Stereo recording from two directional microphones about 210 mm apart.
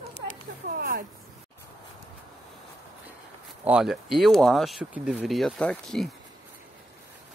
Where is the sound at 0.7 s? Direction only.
45° right (ahead or behind).